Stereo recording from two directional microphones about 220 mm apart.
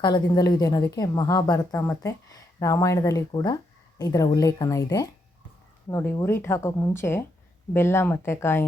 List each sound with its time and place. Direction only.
0.0 s a woman's voice: 15° left (ahead or behind)